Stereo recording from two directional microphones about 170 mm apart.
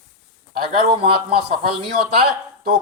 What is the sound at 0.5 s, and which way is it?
Speech, 65° right (ahead or behind).